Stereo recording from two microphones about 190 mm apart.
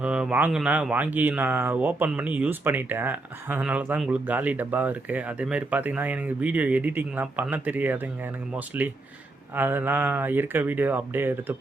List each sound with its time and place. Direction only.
0.0 s speech: 5° right (ahead or behind)